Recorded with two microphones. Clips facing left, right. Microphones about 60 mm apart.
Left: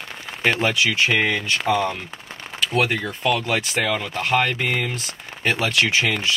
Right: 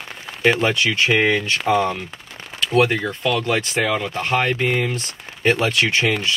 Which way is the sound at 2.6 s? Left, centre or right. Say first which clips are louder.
Right 4 dB; centre.